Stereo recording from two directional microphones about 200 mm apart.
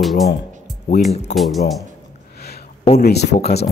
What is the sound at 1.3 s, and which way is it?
Speech, centre (ahead or behind).